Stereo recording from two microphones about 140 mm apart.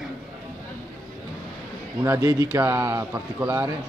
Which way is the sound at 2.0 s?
20° right (ahead or behind).